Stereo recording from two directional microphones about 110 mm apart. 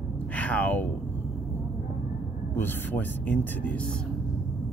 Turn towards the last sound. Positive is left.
turn(degrees=15)  # may be behind; listen again after turning